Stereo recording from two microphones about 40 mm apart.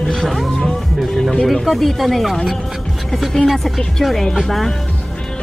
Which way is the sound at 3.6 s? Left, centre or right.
Centre.